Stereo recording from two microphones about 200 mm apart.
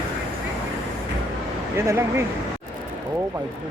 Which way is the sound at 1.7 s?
15° right (ahead or behind).